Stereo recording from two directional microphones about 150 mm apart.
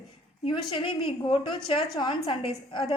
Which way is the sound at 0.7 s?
35° left (ahead or behind).